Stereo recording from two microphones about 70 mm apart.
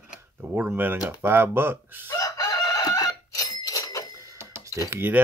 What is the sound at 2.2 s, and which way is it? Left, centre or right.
Bicycle bell, left.